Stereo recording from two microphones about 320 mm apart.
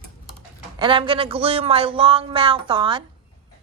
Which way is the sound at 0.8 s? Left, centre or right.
Centre.